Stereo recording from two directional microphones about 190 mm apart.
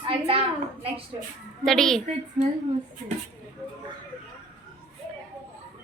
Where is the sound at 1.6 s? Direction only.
Centre (ahead or behind).